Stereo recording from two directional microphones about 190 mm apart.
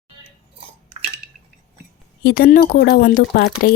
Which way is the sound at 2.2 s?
50° left (ahead or behind).